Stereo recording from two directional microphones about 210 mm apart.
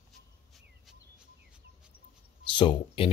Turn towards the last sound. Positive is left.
turn(degrees=25)  # may be behind; listen again after turning